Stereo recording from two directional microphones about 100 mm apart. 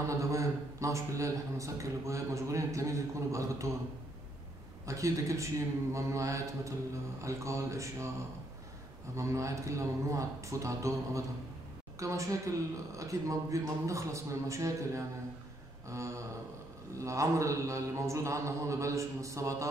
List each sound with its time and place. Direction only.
0.2 s a man's voice: 30° right (ahead or behind)
4.8 s a man's voice: 35° right (ahead or behind)
9.1 s a man's voice: 30° right (ahead or behind)
15.9 s a sound: 30° right (ahead or behind)
17.0 s a man's voice: 30° right (ahead or behind)